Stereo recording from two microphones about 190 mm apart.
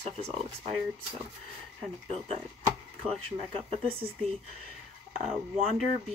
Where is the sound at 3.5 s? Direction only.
30° right (ahead or behind).